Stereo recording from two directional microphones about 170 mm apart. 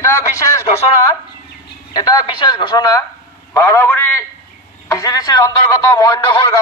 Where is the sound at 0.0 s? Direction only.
15° left (ahead or behind).